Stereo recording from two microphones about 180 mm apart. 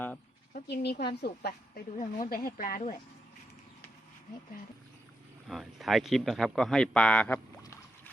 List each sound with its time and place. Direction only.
0.5 s a woman's voice: 65° left (ahead or behind)
2.0 s speech: 45° left (ahead or behind)
5.5 s a man's voice: centre (ahead or behind)